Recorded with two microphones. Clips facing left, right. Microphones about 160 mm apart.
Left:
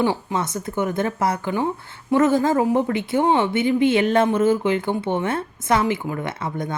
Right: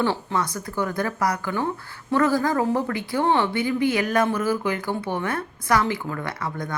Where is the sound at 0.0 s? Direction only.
15° left (ahead or behind).